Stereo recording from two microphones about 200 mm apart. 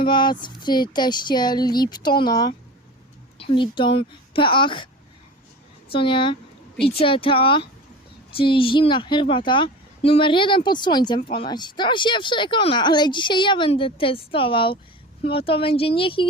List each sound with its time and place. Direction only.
0.0 s speech: 25° left (ahead or behind)
5.9 s speech: 25° left (ahead or behind)